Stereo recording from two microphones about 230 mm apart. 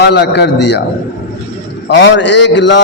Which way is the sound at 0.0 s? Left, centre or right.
Left.